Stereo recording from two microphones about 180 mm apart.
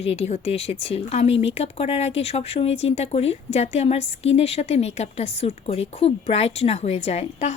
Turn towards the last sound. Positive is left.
turn(degrees=40)  # may be behind; listen again after turning